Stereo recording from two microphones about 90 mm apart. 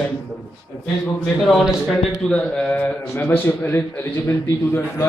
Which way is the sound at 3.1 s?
25° left (ahead or behind).